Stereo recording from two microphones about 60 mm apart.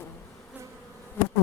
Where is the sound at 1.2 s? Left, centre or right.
Left.